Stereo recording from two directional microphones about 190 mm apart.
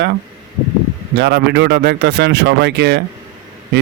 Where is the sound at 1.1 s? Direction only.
65° right (ahead or behind).